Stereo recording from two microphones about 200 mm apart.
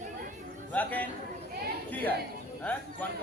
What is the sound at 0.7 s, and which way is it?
Speech, 10° left (ahead or behind).